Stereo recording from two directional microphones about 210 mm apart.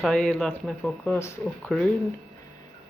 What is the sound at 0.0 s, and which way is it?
Speech, 5° left (ahead or behind).